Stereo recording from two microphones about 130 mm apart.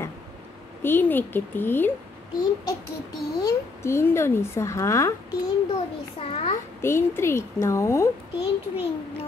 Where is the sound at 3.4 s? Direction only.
25° left (ahead or behind).